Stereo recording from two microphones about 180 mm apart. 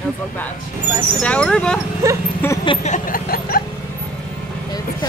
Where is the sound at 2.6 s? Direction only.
30° left (ahead or behind).